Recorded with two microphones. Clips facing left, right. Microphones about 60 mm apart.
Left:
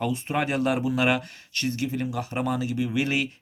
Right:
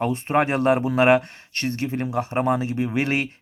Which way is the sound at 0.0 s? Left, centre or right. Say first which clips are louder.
Right 5 dB; right.